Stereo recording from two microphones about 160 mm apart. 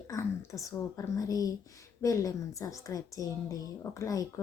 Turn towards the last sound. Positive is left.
turn(degrees=20)  # may be behind; listen again after turning